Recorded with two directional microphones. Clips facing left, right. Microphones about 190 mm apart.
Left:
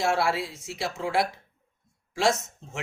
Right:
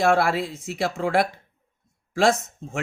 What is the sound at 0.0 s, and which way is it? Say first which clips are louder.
Speech: right 5 dB; 55° right (ahead or behind).